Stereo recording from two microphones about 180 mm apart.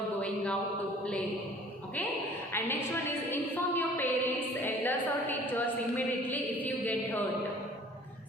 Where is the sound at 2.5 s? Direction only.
15° left (ahead or behind).